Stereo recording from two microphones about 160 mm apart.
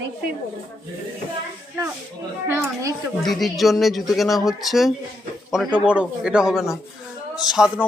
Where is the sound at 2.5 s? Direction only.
15° right (ahead or behind).